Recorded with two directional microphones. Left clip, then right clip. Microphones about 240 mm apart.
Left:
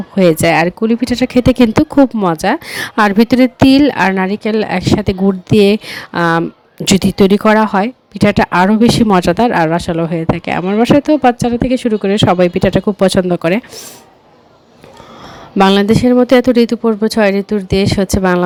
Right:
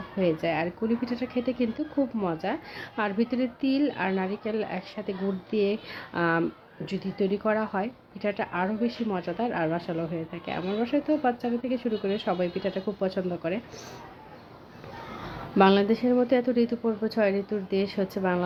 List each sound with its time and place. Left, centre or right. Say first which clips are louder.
0.2 s speech: left 16 dB; left
15.5 s speech: left 11 dB; left